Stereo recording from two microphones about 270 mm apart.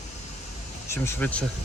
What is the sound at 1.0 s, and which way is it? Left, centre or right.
Speech, centre.